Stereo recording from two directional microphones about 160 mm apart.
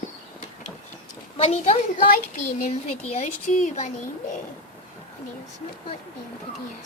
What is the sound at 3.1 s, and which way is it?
Speech, 45° left (ahead or behind).